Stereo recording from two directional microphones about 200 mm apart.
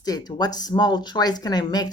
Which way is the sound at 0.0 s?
20° left (ahead or behind).